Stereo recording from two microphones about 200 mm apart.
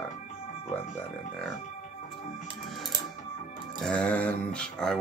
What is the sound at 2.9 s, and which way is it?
Music, 20° right (ahead or behind).